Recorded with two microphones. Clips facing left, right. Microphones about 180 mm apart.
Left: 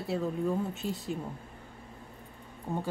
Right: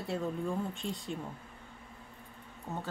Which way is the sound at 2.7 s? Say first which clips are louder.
Left 5 dB; 10° left (ahead or behind).